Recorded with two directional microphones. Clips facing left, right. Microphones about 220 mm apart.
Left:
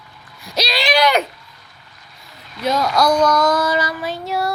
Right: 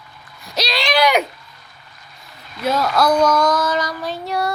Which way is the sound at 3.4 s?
10° left (ahead or behind).